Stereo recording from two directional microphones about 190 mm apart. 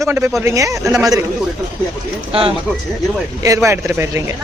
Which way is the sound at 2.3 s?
30° right (ahead or behind).